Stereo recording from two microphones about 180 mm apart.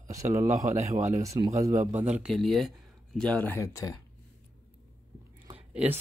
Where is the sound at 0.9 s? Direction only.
45° right (ahead or behind).